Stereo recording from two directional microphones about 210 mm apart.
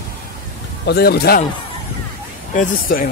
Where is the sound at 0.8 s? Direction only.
50° left (ahead or behind).